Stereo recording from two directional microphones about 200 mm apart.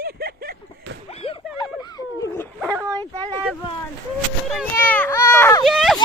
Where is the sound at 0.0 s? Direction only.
50° right (ahead or behind).